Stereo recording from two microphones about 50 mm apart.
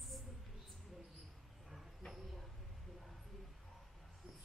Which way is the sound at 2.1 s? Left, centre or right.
Centre.